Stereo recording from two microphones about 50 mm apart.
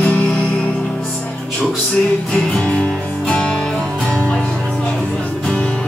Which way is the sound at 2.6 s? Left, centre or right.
Left.